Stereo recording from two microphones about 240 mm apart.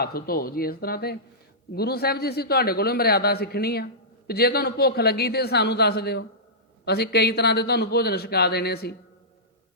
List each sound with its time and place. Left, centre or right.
0.0 s a man's voice: left